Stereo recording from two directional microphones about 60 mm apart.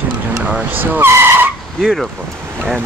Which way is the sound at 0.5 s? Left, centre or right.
Right.